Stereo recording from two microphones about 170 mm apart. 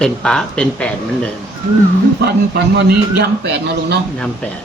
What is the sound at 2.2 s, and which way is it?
A man's voice, 70° right (ahead or behind).